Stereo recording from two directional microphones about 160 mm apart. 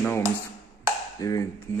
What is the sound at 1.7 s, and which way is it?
Music, 15° left (ahead or behind).